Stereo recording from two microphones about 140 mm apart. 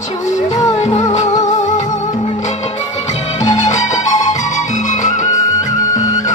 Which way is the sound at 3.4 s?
55° left (ahead or behind).